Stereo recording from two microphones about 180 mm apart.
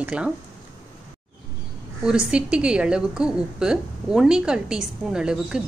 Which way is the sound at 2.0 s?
5° right (ahead or behind).